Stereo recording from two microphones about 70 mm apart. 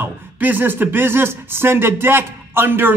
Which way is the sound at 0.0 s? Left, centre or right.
Right.